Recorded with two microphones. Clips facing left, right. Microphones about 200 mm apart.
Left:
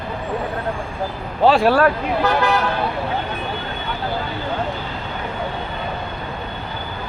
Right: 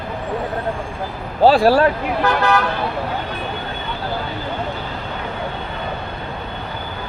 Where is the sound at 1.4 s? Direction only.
35° right (ahead or behind).